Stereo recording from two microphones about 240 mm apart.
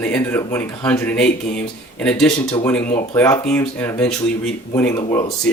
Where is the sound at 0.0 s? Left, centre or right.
Centre.